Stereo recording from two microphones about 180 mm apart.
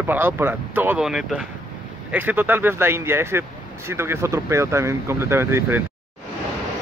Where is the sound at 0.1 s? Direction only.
10° right (ahead or behind).